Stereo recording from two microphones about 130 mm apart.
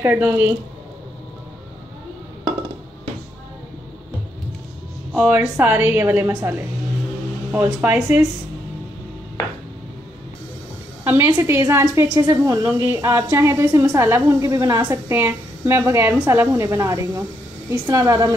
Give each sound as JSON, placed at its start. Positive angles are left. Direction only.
{"t": 0.0, "sound": "a woman's voice", "side_deg": -20}
{"t": 5.3, "sound": "a woman's voice", "side_deg": -15}
{"t": 7.6, "sound": "a woman's voice", "side_deg": -15}
{"t": 11.1, "sound": "a woman's voice", "side_deg": -15}